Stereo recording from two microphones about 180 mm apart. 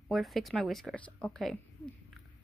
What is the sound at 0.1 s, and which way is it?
A woman's voice, centre (ahead or behind).